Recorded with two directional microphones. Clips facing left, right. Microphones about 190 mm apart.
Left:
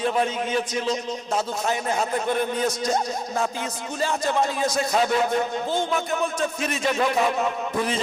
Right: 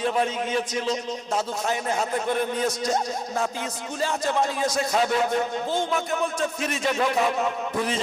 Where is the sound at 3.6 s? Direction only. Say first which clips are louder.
Left 1 dB; 15° left (ahead or behind).